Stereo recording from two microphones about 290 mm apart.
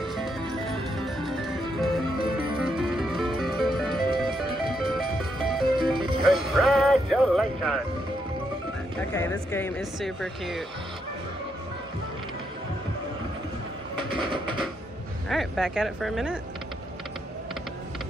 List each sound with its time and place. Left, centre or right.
0.0 s music: centre
9.1 s speech: centre
14.1 s a sound: centre
15.2 s speech: centre